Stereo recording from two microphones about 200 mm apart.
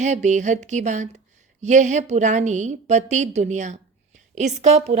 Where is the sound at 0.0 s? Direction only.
35° right (ahead or behind).